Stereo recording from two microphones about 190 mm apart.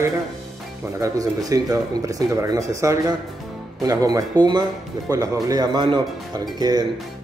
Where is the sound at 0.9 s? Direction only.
20° right (ahead or behind).